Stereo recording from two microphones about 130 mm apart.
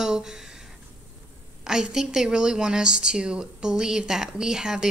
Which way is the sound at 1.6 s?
5° right (ahead or behind).